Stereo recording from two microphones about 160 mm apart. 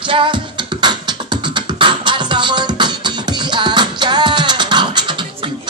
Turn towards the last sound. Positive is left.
turn(degrees=-30)  # may be behind; listen again after turning